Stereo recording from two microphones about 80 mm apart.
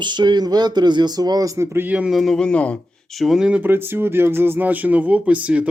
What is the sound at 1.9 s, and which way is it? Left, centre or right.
Speech, centre.